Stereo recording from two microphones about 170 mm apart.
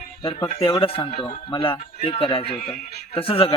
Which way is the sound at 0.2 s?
30° left (ahead or behind).